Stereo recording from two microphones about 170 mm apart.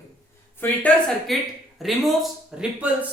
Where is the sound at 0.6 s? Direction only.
10° left (ahead or behind); by 3.0 s 5° right (ahead or behind).